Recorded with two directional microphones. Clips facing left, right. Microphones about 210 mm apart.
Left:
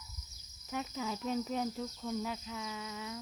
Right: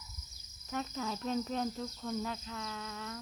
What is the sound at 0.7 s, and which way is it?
Speech, 10° left (ahead or behind).